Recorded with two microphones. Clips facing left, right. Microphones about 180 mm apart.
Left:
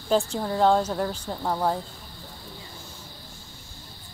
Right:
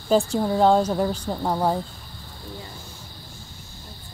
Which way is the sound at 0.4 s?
15° right (ahead or behind).